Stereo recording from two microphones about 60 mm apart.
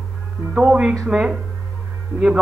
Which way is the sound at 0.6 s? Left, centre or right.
Centre.